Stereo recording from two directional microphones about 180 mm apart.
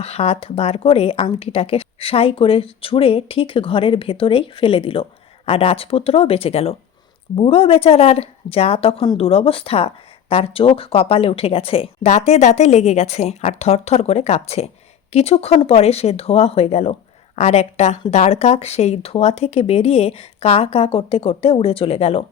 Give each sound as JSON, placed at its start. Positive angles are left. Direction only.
{"t": 0.0, "sound": "a woman's voice", "side_deg": 35}